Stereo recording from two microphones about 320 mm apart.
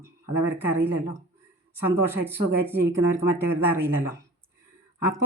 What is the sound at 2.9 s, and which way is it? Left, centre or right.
Speech, centre.